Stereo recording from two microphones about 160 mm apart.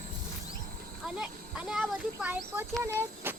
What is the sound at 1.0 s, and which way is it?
A child's voice, 5° right (ahead or behind).